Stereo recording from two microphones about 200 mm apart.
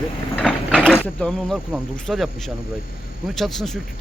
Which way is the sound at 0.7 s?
Centre (ahead or behind).